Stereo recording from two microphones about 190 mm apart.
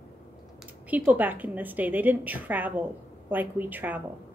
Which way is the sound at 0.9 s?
10° right (ahead or behind).